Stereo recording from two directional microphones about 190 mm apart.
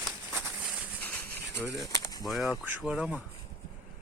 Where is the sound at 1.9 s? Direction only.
20° left (ahead or behind).